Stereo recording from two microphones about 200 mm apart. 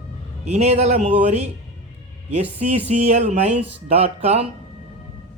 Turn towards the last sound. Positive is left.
turn(degrees=-30)  # may be behind; listen again after turning